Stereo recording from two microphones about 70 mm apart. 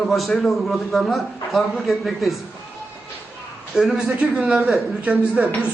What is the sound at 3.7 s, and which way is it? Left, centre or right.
A man's voice, centre.